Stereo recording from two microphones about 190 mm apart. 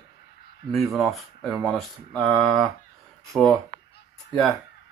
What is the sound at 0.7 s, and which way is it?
Speech, centre (ahead or behind).